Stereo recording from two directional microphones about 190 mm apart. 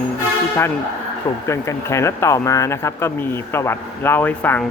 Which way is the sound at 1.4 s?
15° left (ahead or behind).